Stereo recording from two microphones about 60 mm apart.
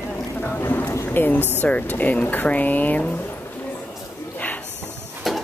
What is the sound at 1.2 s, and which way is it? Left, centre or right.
Speech, left.